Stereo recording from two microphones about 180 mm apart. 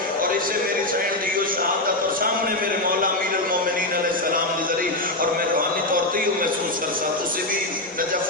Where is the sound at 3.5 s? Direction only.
50° right (ahead or behind).